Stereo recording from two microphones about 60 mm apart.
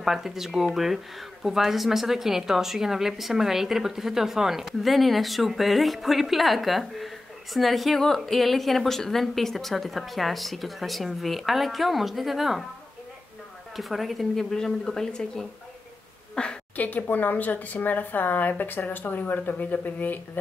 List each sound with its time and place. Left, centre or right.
0.0 s a woman's voice: centre
13.7 s a woman's voice: centre
16.7 s speech: left